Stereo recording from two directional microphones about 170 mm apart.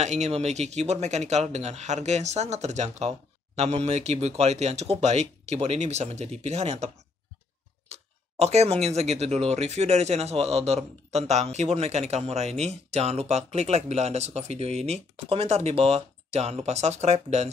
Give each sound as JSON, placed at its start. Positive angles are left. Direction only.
{"t": 0.0, "sound": "speech", "side_deg": -40}
{"t": 7.9, "sound": "speech", "side_deg": -40}